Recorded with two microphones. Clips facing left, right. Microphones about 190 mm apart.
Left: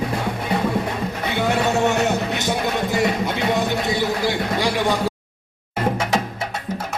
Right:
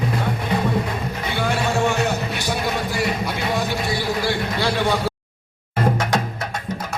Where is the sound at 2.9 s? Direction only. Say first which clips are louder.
Left 3 dB; 20° left (ahead or behind).